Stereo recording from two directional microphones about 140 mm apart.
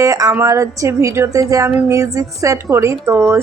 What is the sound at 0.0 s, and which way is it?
Speech, 25° right (ahead or behind).